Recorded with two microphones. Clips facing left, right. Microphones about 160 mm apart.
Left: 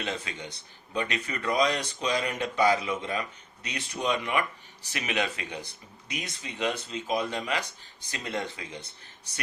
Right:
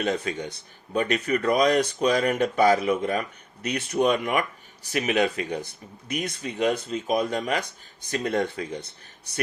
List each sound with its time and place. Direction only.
0.0 s speech: 50° right (ahead or behind)